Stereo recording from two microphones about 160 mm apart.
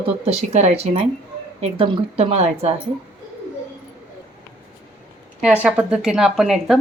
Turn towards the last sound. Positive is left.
turn(degrees=0)  # may be behind; listen again after turning